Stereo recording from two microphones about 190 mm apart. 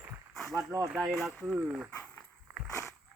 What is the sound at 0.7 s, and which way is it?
Speech, 5° right (ahead or behind).